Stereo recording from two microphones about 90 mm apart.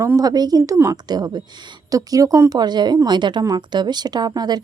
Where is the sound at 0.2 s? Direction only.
45° right (ahead or behind).